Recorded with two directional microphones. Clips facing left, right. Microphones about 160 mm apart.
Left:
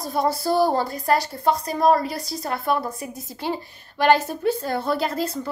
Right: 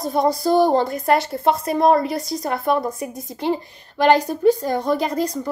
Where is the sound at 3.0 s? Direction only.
Centre (ahead or behind).